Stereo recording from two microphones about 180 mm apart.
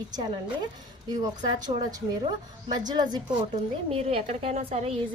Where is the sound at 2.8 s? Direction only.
25° right (ahead or behind).